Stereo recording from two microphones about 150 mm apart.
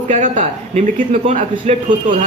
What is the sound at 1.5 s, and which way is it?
Speech, 35° right (ahead or behind).